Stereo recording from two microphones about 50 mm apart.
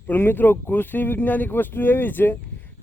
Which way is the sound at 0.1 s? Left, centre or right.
Left.